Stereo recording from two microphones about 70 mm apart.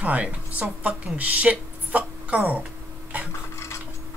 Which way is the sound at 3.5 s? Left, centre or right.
Left.